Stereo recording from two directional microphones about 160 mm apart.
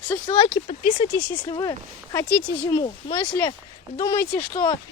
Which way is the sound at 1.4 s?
25° left (ahead or behind).